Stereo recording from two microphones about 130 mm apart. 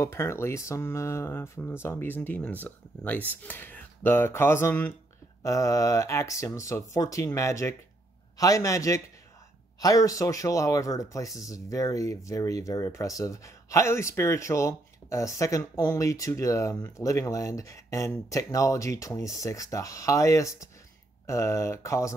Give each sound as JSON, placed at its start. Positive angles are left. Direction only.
{"t": 0.0, "sound": "speech", "side_deg": 20}